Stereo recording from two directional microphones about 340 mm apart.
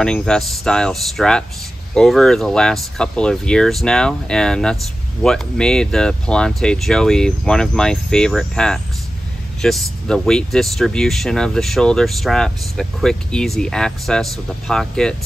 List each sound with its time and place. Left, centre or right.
0.0 s speech: centre